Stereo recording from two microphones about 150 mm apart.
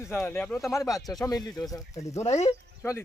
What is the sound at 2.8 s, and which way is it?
Speech, 20° left (ahead or behind).